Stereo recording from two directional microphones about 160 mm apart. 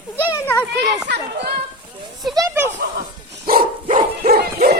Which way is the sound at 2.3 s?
15° right (ahead or behind).